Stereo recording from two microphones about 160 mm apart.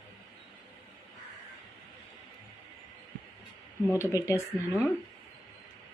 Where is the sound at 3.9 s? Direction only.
20° left (ahead or behind).